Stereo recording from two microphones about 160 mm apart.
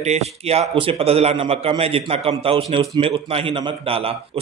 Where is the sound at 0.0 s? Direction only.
40° right (ahead or behind).